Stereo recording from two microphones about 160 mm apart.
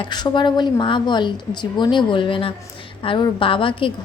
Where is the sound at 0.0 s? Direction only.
30° left (ahead or behind).